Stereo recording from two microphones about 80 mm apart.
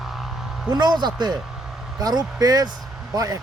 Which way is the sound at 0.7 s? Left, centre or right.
Right.